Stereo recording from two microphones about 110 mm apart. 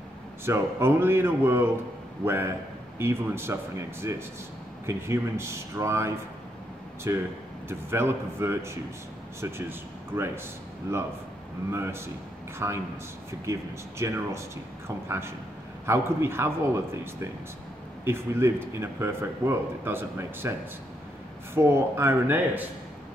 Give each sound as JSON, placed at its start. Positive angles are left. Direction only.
{"t": 0.5, "sound": "a man's voice", "side_deg": -25}
{"t": 11.7, "sound": "a man's voice", "side_deg": -20}
{"t": 21.5, "sound": "a man's voice", "side_deg": -25}